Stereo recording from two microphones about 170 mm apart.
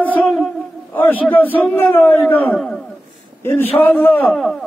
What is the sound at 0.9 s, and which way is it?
Speech, 10° left (ahead or behind).